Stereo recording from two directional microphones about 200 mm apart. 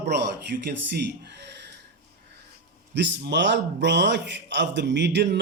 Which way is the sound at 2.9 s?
60° right (ahead or behind).